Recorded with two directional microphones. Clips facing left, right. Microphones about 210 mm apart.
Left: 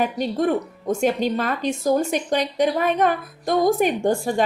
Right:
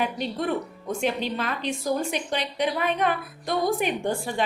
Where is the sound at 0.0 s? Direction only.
45° left (ahead or behind).